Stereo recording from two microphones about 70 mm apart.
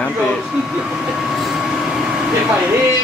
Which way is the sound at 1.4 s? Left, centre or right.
Centre.